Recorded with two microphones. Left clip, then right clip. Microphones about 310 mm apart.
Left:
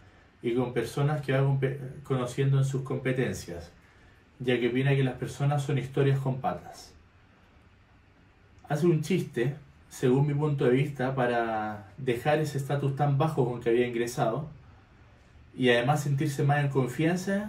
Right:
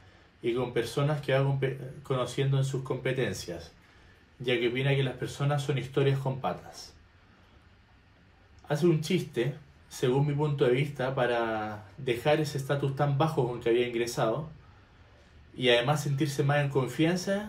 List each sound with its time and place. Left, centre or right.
0.4 s speech: centre
8.6 s speech: centre
15.5 s speech: centre